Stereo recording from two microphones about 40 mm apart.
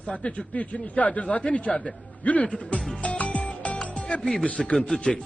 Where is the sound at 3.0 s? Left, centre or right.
Left.